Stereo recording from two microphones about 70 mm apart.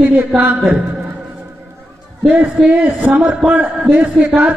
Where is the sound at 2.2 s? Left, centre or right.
Centre.